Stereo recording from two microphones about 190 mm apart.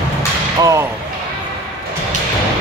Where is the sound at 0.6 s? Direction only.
15° right (ahead or behind).